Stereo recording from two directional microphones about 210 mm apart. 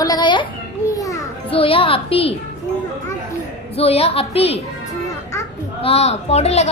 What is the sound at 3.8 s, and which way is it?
Speech, 30° left (ahead or behind).